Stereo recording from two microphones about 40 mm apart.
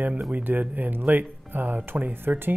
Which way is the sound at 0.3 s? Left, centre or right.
Right.